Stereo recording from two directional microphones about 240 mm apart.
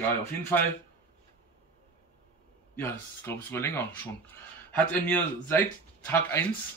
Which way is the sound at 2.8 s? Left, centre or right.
Centre.